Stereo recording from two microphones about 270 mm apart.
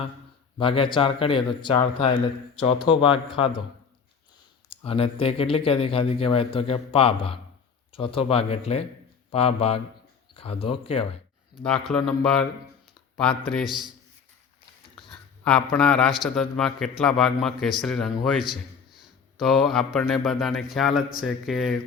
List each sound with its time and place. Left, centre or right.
0.6 s speech: centre
4.7 s speech: left
11.6 s speech: centre
15.1 s speech: centre